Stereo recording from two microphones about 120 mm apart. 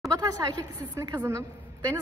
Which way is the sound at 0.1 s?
30° right (ahead or behind).